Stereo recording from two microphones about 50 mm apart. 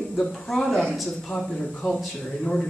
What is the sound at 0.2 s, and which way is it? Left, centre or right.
Speech, centre.